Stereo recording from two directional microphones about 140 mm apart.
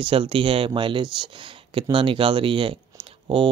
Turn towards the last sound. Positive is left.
turn(degrees=-40)  # may be behind; listen again after turning